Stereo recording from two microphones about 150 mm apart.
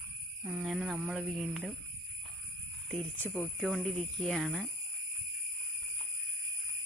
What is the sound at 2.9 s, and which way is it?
Speech, 10° left (ahead or behind).